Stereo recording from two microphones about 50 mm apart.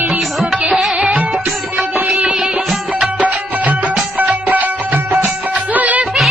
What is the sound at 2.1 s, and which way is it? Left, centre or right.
Music, right.